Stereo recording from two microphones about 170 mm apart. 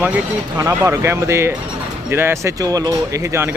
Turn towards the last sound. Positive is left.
turn(degrees=-15)  # may be behind; listen again after turning